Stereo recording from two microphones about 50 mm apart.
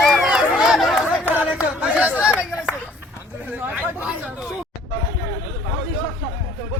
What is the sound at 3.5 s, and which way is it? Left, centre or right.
Hubbub, right.